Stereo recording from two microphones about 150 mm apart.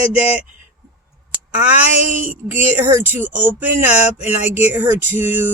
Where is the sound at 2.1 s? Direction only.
60° right (ahead or behind).